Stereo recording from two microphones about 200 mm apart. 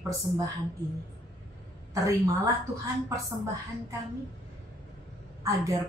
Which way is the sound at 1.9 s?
15° right (ahead or behind).